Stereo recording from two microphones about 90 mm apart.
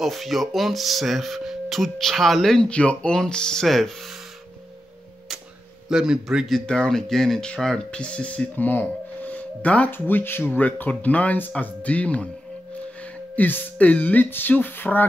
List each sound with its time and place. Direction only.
0.0 s speech: centre (ahead or behind)
5.9 s a man's voice: 5° right (ahead or behind); by 15.0 s 20° left (ahead or behind)